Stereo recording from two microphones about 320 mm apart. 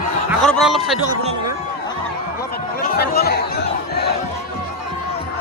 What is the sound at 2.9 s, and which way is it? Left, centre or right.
Chatter, left.